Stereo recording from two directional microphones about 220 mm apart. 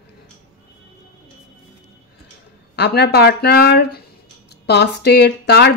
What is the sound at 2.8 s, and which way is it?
A woman's voice, 50° left (ahead or behind).